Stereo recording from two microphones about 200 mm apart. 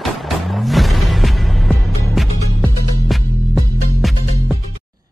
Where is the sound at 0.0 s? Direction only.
Centre (ahead or behind).